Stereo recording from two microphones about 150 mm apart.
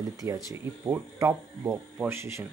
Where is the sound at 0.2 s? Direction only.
20° right (ahead or behind).